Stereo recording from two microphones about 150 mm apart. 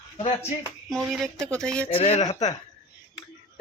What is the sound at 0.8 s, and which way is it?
Speech, centre (ahead or behind).